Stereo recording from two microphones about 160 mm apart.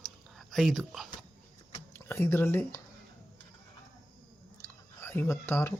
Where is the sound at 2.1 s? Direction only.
15° left (ahead or behind).